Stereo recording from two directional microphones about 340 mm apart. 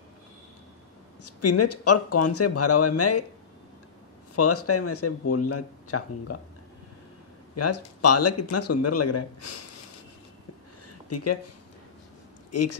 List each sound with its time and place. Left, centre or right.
1.2 s speech: left
4.4 s speech: left
7.5 s speech: left
11.1 s speech: left
12.4 s a sound: left